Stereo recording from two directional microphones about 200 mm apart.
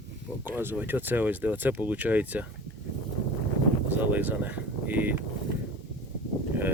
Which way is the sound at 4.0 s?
10° right (ahead or behind).